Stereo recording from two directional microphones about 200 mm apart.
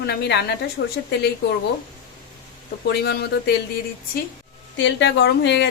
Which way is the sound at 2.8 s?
55° left (ahead or behind).